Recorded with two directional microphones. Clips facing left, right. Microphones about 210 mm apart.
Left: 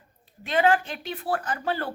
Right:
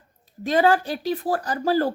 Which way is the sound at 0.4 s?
40° right (ahead or behind).